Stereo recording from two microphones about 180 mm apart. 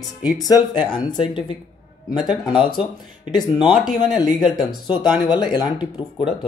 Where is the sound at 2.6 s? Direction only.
30° left (ahead or behind).